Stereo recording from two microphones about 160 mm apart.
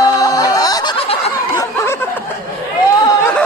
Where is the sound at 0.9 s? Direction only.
35° left (ahead or behind).